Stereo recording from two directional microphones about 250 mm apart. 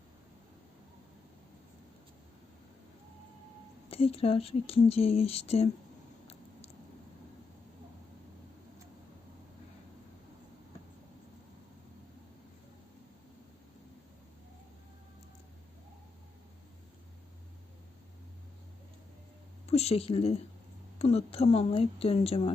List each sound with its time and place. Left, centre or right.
3.8 s speech: left
19.6 s speech: left